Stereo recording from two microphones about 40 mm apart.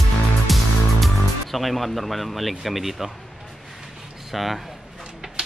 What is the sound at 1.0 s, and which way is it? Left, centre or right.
Speech, centre.